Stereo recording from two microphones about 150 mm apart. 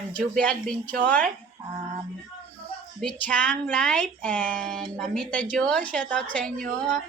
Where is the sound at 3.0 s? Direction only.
10° left (ahead or behind).